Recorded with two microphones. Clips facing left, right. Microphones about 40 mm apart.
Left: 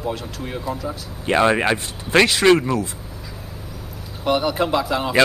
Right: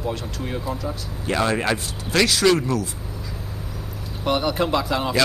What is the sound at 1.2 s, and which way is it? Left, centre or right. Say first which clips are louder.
Speech: left 5 dB; left.